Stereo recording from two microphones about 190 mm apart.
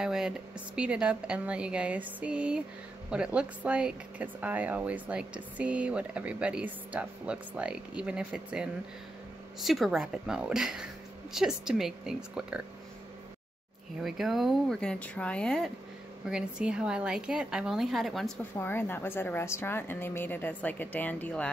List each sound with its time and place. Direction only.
0.0 s a woman's voice: 5° right (ahead or behind)
14.0 s a woman's voice: centre (ahead or behind)
18.6 s a woman's voice: 10° left (ahead or behind)